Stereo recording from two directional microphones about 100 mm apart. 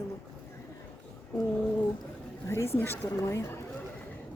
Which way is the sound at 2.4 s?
25° left (ahead or behind).